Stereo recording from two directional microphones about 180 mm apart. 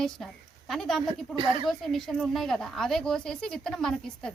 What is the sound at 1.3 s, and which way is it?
Speech, 30° right (ahead or behind).